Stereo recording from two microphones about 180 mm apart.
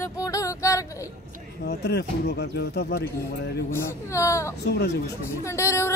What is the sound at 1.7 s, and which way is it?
Speech, 65° left (ahead or behind).